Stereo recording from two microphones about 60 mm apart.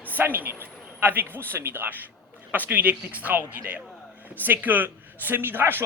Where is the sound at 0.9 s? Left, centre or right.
Right.